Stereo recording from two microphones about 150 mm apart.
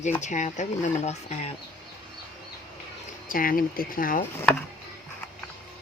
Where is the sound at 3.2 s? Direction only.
70° left (ahead or behind).